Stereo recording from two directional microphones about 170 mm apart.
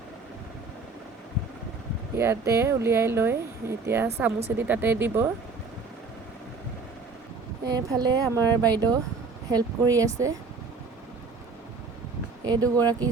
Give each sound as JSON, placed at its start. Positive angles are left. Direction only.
{"t": 2.1, "sound": "speech", "side_deg": -15}
{"t": 7.6, "sound": "speech", "side_deg": -20}
{"t": 12.5, "sound": "speech", "side_deg": -20}